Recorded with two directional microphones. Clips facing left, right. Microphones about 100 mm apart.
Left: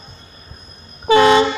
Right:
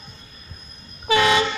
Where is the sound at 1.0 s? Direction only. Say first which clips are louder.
Left 7 dB; 30° left (ahead or behind).